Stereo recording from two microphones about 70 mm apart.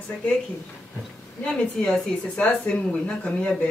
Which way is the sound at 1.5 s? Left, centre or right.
Centre.